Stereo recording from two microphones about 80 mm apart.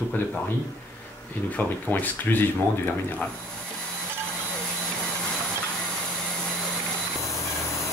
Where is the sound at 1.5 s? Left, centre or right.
Left.